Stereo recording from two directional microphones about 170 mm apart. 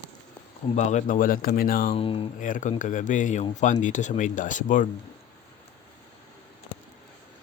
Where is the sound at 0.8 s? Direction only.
45° left (ahead or behind).